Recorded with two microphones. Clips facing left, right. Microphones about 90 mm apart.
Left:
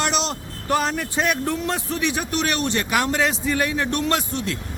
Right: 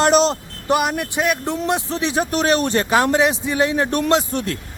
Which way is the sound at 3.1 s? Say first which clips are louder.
Right 4 dB; 20° right (ahead or behind).